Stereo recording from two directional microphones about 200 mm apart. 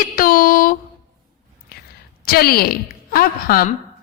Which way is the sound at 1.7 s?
50° left (ahead or behind).